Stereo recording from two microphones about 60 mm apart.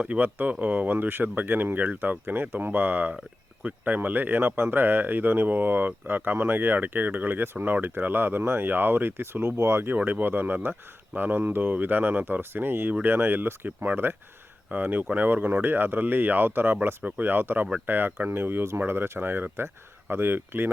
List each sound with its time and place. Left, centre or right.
0.0 s speech: right
9.9 s speech: right